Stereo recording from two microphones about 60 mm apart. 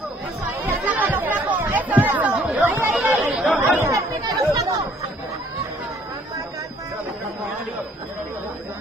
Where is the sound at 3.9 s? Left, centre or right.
Right.